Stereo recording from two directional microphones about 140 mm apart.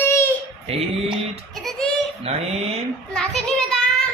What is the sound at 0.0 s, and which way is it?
Babbling, 20° left (ahead or behind).